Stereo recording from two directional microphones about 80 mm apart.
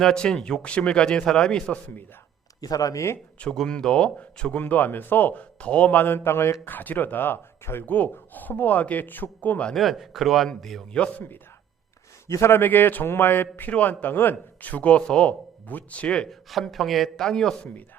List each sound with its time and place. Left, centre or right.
0.0 s speech: centre
2.6 s speech: left
3.5 s a man's voice: centre
9.7 s speech: centre
11.0 s a man's voice: left
16.5 s speech: centre